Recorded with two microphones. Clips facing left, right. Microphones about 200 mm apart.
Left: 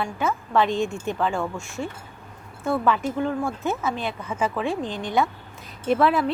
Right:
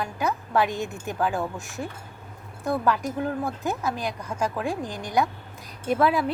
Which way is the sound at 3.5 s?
Centre (ahead or behind).